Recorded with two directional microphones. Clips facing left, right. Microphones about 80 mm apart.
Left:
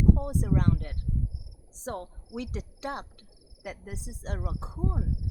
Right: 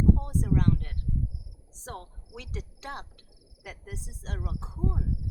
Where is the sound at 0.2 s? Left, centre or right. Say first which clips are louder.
Even; centre.